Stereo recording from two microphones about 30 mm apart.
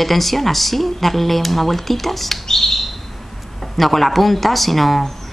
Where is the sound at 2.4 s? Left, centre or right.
Centre.